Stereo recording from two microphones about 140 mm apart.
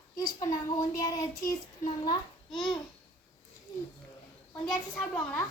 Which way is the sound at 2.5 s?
Centre (ahead or behind).